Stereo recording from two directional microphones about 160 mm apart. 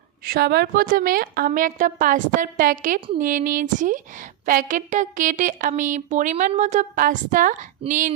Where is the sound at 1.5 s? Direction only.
55° right (ahead or behind).